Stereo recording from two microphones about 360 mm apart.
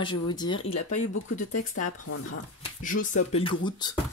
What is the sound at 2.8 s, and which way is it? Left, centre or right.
Speech, left.